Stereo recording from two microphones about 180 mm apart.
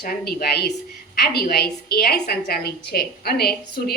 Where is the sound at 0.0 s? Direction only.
55° left (ahead or behind).